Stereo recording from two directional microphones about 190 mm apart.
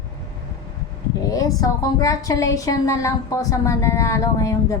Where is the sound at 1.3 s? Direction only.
20° left (ahead or behind).